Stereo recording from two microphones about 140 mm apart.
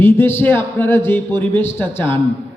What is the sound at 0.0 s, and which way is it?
A man's voice, 15° left (ahead or behind).